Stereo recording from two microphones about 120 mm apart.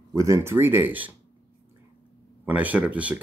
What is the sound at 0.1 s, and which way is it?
Speech, 25° right (ahead or behind).